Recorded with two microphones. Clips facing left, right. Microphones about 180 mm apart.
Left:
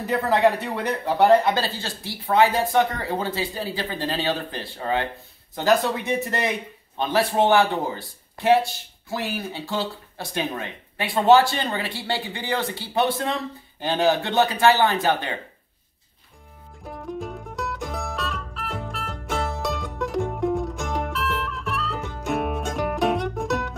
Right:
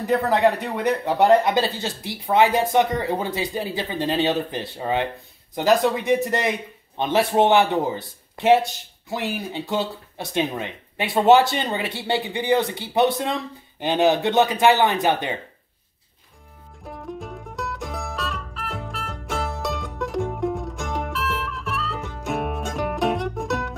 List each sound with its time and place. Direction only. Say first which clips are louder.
0.8 s speech: right 1 dB; 15° right (ahead or behind)
16.8 s music: left 2 dB; centre (ahead or behind)